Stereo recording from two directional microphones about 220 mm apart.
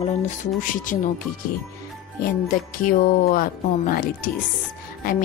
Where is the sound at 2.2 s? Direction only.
40° left (ahead or behind).